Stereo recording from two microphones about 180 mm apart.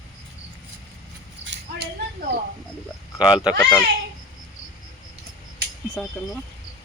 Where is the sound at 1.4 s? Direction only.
70° right (ahead or behind).